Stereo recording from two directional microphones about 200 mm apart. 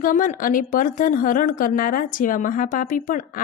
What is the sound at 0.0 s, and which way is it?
Speech, 40° left (ahead or behind).